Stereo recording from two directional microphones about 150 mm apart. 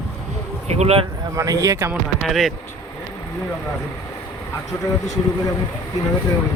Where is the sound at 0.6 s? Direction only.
45° right (ahead or behind).